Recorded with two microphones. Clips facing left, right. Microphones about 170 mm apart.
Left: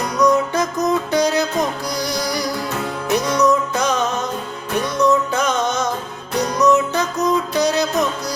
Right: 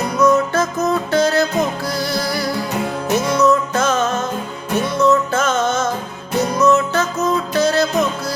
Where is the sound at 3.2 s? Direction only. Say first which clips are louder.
Right 2 dB; centre (ahead or behind).